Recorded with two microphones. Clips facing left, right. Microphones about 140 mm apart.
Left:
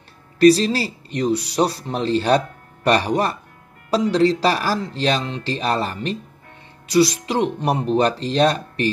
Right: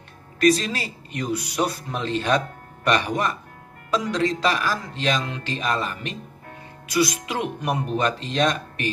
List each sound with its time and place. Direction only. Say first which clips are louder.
0.4 s speech: left 6 dB; 35° left (ahead or behind)